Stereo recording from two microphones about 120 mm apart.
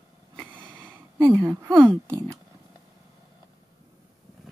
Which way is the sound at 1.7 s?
20° right (ahead or behind).